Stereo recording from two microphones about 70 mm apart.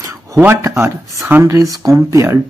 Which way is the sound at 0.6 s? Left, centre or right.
Right.